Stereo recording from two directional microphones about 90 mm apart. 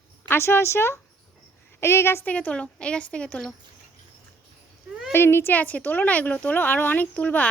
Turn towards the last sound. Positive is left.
turn(degrees=15)  # may be behind; listen again after turning